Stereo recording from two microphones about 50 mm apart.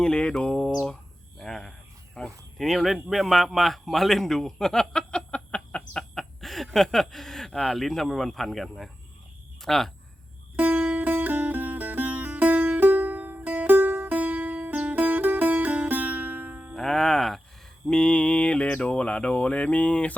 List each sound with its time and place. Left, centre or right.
0.0 s a sound: centre
2.6 s speech: centre
6.1 s speech: centre
10.6 s music: right
16.7 s speech: centre
17.8 s speech: centre